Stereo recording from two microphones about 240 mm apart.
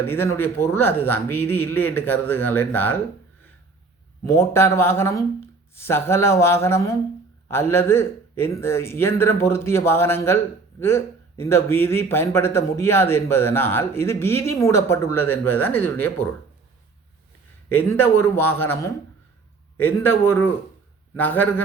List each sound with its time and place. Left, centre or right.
0.0 s a man's voice: centre
4.3 s a man's voice: centre
17.7 s a man's voice: centre